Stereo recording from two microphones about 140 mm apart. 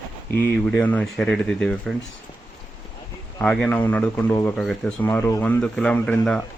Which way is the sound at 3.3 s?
15° left (ahead or behind).